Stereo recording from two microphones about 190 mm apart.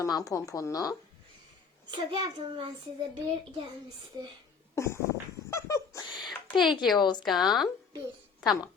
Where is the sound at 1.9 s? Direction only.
25° right (ahead or behind).